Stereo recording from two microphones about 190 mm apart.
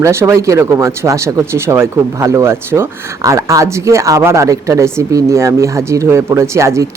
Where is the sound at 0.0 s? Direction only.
15° right (ahead or behind).